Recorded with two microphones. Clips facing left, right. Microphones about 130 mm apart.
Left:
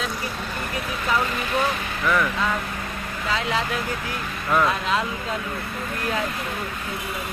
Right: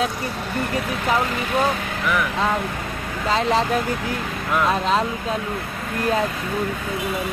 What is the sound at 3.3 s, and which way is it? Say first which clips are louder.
Speech: right 6 dB; 40° right (ahead or behind).